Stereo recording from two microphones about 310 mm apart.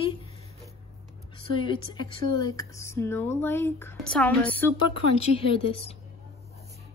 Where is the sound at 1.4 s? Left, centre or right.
Centre.